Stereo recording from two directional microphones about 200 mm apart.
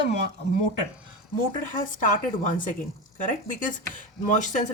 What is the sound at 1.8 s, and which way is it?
Speech, 40° left (ahead or behind).